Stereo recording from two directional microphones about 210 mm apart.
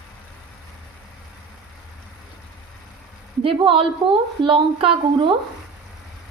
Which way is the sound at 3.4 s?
25° right (ahead or behind).